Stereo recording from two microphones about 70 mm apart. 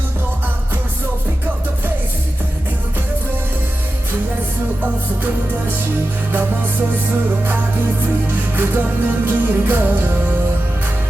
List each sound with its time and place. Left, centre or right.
8.3 s music: right